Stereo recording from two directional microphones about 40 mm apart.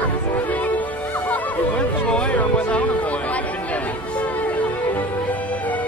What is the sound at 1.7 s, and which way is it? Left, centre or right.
Music, left.